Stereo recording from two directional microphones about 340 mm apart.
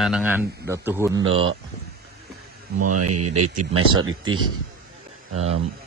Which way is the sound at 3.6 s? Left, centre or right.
Centre.